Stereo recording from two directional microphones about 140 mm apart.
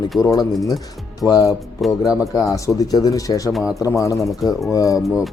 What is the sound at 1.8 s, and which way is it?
Speech, centre (ahead or behind).